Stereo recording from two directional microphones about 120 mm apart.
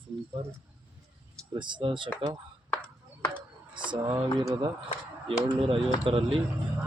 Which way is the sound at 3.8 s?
35° right (ahead or behind).